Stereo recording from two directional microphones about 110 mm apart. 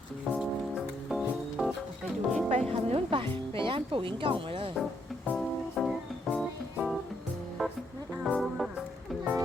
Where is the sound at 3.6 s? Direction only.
50° right (ahead or behind).